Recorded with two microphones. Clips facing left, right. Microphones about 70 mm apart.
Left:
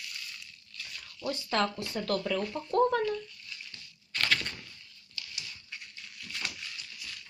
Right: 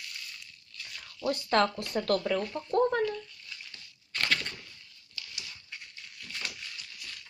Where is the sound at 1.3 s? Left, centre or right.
Right.